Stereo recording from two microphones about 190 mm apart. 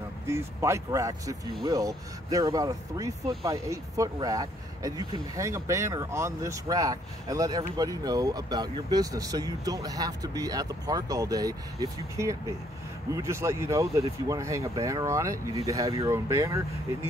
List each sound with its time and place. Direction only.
0.3 s speech: 15° right (ahead or behind)